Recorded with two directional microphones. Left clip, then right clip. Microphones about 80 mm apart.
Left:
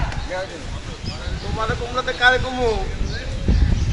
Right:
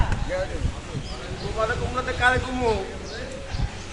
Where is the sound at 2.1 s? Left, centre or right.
Centre.